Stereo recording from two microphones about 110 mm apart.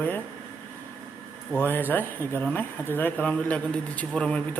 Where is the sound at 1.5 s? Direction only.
20° left (ahead or behind).